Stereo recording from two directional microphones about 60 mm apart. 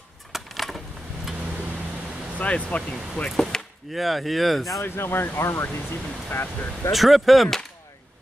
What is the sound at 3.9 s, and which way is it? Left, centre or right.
Speech, centre.